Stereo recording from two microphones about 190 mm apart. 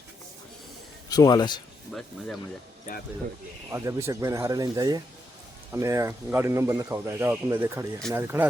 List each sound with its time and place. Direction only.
1.1 s a man's voice: 20° left (ahead or behind)
1.9 s speech: centre (ahead or behind)
3.7 s speech: 15° right (ahead or behind)